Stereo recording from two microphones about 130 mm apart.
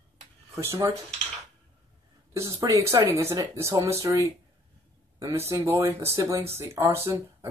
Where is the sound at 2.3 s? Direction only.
25° right (ahead or behind).